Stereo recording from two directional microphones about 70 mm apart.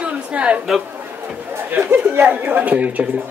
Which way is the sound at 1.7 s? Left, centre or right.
Right.